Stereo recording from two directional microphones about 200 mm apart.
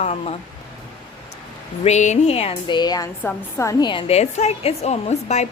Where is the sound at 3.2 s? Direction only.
15° left (ahead or behind).